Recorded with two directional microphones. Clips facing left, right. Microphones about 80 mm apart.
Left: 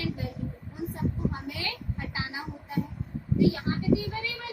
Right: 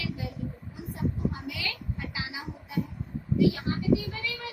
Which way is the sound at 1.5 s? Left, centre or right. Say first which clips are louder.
Even; left.